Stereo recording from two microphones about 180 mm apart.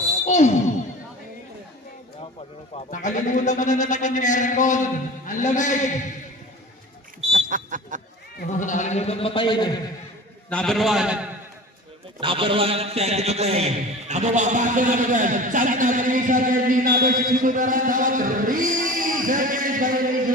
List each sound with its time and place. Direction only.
0.3 s a sound: 40° left (ahead or behind)
2.7 s speech: 45° left (ahead or behind)
7.3 s smoke detector: 45° right (ahead or behind)
8.4 s speech: 45° left (ahead or behind); by 9.7 s 25° left (ahead or behind)
10.5 s a man's voice: 5° left (ahead or behind)
12.2 s a man's voice: 30° right (ahead or behind); by 20.3 s 50° right (ahead or behind)